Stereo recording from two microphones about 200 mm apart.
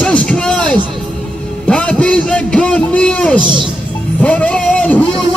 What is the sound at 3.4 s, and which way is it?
Speech, 25° right (ahead or behind).